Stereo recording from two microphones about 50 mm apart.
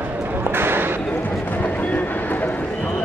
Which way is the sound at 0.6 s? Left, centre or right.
Right.